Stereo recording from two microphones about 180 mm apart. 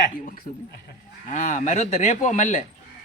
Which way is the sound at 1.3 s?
45° left (ahead or behind).